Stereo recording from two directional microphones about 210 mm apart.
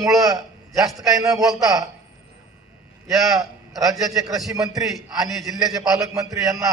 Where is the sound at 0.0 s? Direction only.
15° right (ahead or behind).